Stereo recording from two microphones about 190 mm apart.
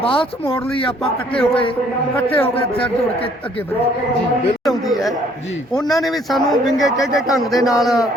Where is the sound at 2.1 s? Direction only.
10° left (ahead or behind).